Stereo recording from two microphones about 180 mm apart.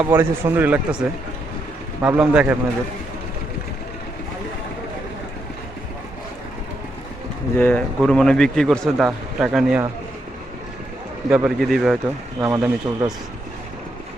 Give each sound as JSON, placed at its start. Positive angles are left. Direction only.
{"t": 0.0, "sound": "speech", "side_deg": -10}
{"t": 7.5, "sound": "a man's voice", "side_deg": 10}
{"t": 11.3, "sound": "a man's voice", "side_deg": -5}
{"t": 12.4, "sound": "speech", "side_deg": -15}